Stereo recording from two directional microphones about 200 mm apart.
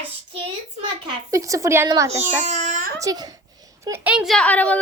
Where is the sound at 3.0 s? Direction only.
20° right (ahead or behind); by 4.8 s 5° left (ahead or behind).